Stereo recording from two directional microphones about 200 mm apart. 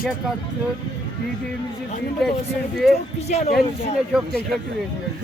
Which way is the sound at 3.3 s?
35° left (ahead or behind).